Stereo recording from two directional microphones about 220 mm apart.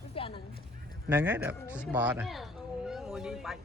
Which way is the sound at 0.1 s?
25° left (ahead or behind).